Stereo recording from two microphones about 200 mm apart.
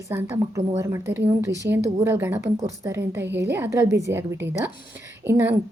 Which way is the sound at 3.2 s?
60° right (ahead or behind).